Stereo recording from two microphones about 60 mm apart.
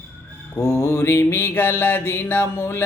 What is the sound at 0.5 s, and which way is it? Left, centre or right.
Mantra, left.